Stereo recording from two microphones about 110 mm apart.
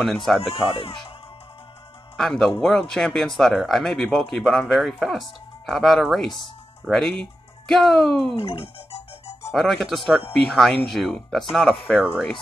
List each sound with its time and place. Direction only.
0.0 s speech: centre (ahead or behind)
0.4 s speech: 55° left (ahead or behind)
2.1 s speech: 5° left (ahead or behind)
8.4 s speech: 55° left (ahead or behind)
9.5 s speech: centre (ahead or behind)